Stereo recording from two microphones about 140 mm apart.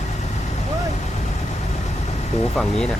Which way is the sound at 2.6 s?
5° left (ahead or behind).